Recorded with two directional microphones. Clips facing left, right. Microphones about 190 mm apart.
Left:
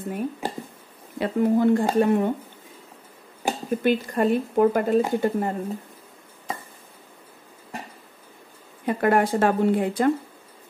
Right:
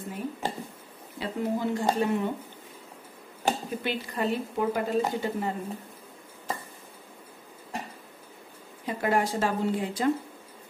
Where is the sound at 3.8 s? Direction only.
50° left (ahead or behind).